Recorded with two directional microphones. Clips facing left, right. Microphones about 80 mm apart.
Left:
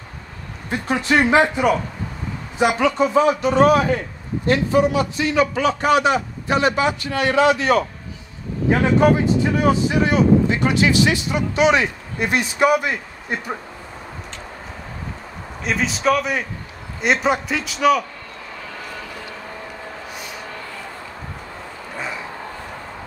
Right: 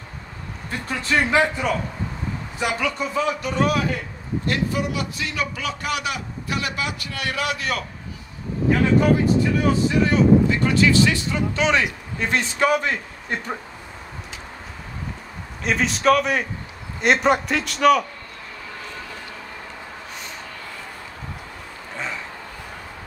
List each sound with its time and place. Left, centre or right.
0.7 s speech: left
15.6 s a man's voice: centre
21.9 s a sound: centre